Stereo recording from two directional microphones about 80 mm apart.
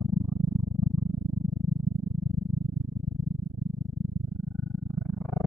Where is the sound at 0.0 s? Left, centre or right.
Centre.